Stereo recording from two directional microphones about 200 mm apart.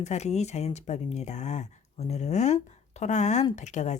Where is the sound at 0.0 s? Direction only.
35° left (ahead or behind).